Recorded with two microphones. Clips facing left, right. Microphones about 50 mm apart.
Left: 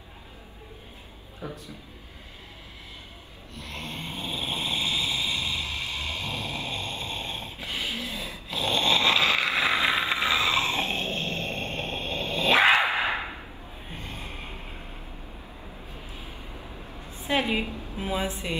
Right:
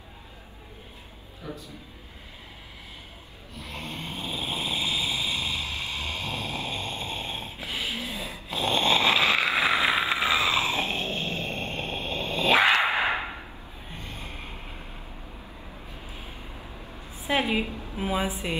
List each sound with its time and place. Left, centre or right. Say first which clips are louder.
3.5 s snoring: even; centre
5.8 s a sound: even; right
6.3 s dog: right 1 dB; right; by 7.6 s centre
7.6 s a sound: even; centre
8.5 s snoring: right 1 dB; centre
12.8 s whip: right 1 dB; right
13.9 s gasp: left 1 dB; left
17.3 s a sound: even; centre
17.9 s a woman's voice: right 2 dB; centre